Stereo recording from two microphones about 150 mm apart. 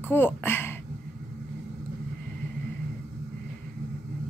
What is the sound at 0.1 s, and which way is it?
Speech, 15° left (ahead or behind).